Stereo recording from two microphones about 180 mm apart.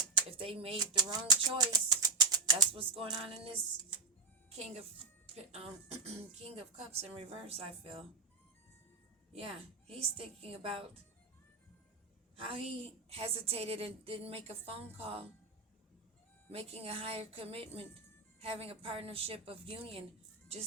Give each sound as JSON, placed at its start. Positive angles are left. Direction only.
{"t": 0.3, "sound": "a woman's voice", "side_deg": -30}
{"t": 9.3, "sound": "a woman's voice", "side_deg": -35}
{"t": 12.4, "sound": "a woman's voice", "side_deg": -30}
{"t": 16.5, "sound": "a woman's voice", "side_deg": -35}